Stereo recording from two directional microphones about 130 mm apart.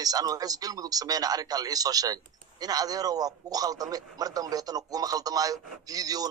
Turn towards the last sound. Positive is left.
turn(degrees=-30)  # may be behind; listen again after turning